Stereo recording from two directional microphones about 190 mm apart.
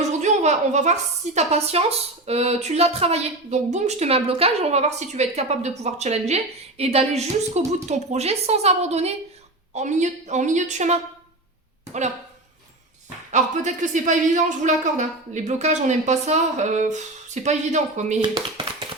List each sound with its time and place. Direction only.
0.0 s a woman's voice: 40° right (ahead or behind)
13.3 s a woman's voice: 40° right (ahead or behind)
18.2 s speech: 25° right (ahead or behind)